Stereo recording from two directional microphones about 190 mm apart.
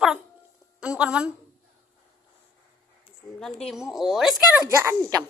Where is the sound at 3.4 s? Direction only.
Centre (ahead or behind).